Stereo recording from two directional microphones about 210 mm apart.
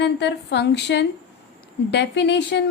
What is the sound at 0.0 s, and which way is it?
A woman's voice, 55° left (ahead or behind).